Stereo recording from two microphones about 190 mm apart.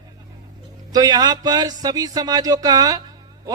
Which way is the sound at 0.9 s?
20° right (ahead or behind).